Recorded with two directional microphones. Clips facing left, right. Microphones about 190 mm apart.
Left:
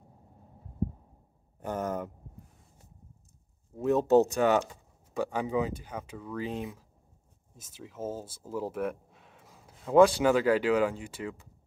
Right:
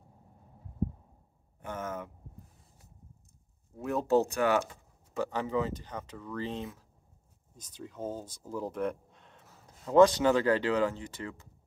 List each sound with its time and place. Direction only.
1.6 s speech: 35° left (ahead or behind)
3.7 s speech: 20° left (ahead or behind)